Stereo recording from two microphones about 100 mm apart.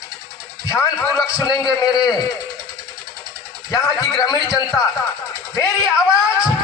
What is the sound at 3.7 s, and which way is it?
Speech, 40° left (ahead or behind).